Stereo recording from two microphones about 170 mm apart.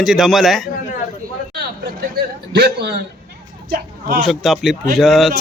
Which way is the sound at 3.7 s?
60° right (ahead or behind).